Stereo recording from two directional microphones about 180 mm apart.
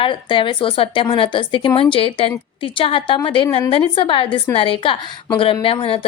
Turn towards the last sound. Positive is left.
turn(degrees=30)  # may be behind; listen again after turning